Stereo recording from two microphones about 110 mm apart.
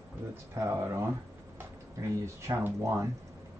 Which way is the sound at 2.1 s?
25° right (ahead or behind).